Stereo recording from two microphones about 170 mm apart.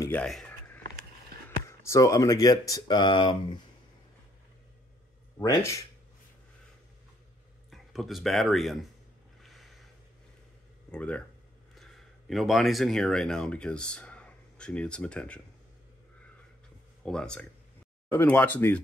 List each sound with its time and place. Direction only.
0.0 s a sound: 10° left (ahead or behind)
1.7 s speech: 15° left (ahead or behind)
5.4 s speech: 20° left (ahead or behind)
7.7 s speech: centre (ahead or behind)
9.4 s boat: centre (ahead or behind)
10.9 s speech: 5° left (ahead or behind)
17.0 s speech: 5° left (ahead or behind)